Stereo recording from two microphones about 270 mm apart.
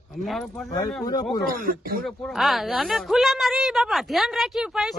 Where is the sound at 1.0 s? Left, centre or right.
Centre.